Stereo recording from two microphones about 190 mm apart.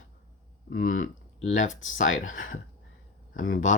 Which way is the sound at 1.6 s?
90° left.